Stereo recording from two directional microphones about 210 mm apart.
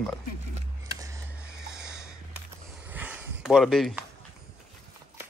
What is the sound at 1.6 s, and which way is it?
Snort, 5° right (ahead or behind).